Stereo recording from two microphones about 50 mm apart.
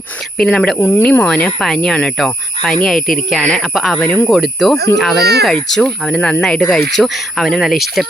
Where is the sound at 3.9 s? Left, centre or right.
Left.